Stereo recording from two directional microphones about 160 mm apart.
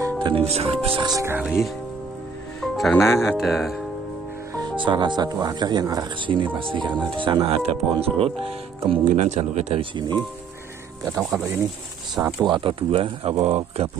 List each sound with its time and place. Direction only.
0.0 s speech: 30° right (ahead or behind)
1.4 s speech: 5° right (ahead or behind)
2.6 s music: 5° left (ahead or behind)
3.2 s speech: centre (ahead or behind)
4.6 s speech: 30° right (ahead or behind)
9.0 s speech: 45° right (ahead or behind)
11.2 s speech: 10° right (ahead or behind)
12.4 s speech: 30° right (ahead or behind)